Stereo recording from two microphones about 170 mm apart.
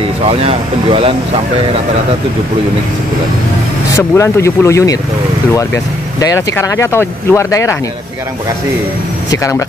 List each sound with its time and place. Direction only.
0.2 s speech: 35° right (ahead or behind)
3.9 s speech: 20° left (ahead or behind)
6.1 s speech: 20° left (ahead or behind)
9.3 s speech: 20° left (ahead or behind)